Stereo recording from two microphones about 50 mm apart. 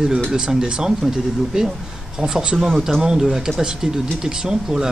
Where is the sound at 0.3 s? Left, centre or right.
Centre.